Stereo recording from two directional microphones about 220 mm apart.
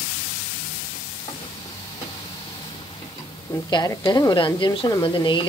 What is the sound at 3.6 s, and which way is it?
Speech, 15° left (ahead or behind).